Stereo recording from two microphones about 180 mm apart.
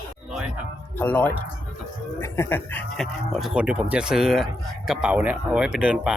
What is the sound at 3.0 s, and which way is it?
Speech, centre (ahead or behind).